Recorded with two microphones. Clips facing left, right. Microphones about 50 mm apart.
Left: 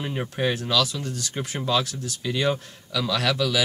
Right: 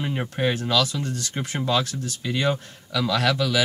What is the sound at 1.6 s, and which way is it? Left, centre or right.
Speech, centre.